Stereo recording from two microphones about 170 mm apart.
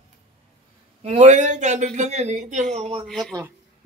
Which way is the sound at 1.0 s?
45° right (ahead or behind).